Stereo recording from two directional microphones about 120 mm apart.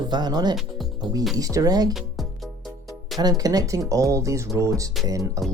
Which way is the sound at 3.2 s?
30° right (ahead or behind).